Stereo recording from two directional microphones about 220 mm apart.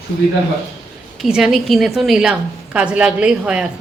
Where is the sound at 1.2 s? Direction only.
Centre (ahead or behind).